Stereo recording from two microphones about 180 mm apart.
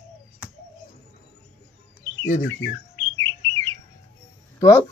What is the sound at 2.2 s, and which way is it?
Bird, 45° left (ahead or behind).